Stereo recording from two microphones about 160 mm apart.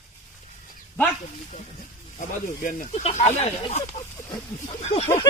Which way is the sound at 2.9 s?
40° left (ahead or behind).